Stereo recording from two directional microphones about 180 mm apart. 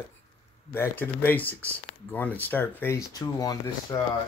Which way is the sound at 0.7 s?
10° left (ahead or behind).